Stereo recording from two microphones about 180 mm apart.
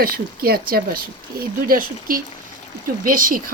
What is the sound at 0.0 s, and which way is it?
Speech, 55° right (ahead or behind).